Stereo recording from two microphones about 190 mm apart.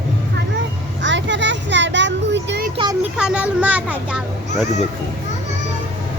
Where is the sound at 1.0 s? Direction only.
70° right (ahead or behind).